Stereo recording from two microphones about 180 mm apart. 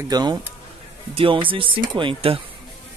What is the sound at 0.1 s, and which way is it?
Speech, 25° right (ahead or behind).